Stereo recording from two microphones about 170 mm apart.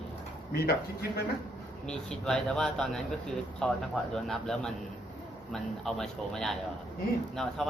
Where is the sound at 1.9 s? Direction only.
5° left (ahead or behind).